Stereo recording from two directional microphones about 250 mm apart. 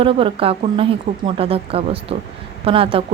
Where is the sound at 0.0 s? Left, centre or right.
Right.